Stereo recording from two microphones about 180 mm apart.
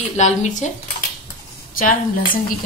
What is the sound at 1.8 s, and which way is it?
Speech, 50° left (ahead or behind).